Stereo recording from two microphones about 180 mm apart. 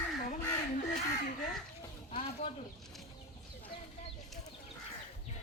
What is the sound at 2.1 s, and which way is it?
Speech, 35° left (ahead or behind).